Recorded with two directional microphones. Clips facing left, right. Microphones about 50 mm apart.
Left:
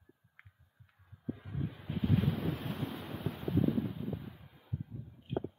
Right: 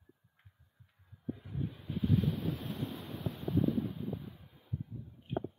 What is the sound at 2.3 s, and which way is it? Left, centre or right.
Waves, left.